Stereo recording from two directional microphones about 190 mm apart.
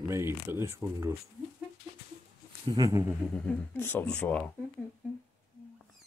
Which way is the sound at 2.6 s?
20° right (ahead or behind).